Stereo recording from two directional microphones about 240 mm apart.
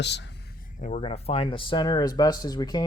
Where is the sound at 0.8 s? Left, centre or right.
Left.